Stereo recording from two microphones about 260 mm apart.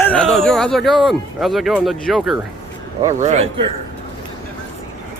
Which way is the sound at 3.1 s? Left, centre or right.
Right.